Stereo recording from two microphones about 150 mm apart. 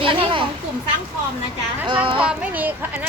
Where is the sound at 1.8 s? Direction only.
35° right (ahead or behind).